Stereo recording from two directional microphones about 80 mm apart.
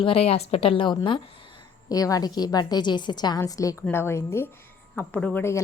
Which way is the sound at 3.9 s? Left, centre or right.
Left.